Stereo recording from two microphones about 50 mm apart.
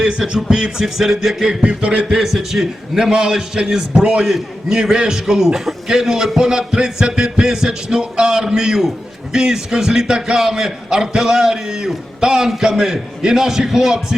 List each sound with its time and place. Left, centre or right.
0.0 s a man's voice: centre
1.6 s a sound: right
2.0 s a man's voice: centre